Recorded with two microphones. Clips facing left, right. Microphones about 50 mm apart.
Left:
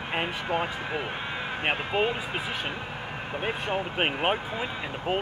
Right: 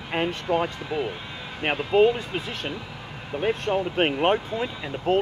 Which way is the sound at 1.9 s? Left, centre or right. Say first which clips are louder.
Right 7 dB; centre.